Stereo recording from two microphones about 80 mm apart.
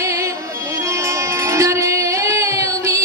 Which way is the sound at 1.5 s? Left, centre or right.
Right.